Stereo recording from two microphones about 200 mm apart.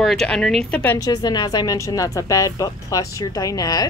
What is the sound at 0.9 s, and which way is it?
Speech, 20° left (ahead or behind).